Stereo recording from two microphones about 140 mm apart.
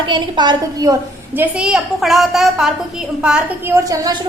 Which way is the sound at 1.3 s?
10° right (ahead or behind).